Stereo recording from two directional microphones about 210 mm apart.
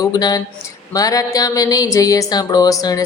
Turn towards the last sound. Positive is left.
turn(degrees=15)  # may be behind; listen again after turning